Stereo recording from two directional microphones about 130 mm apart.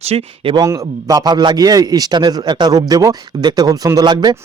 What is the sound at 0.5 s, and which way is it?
A man's voice, 25° right (ahead or behind).